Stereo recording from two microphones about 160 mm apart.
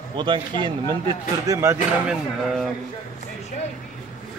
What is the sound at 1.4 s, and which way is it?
Speech, 15° right (ahead or behind).